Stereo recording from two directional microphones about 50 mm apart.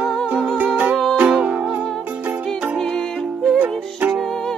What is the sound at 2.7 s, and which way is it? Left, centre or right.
Music, centre.